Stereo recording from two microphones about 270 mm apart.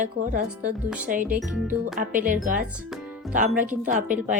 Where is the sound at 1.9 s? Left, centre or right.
Right.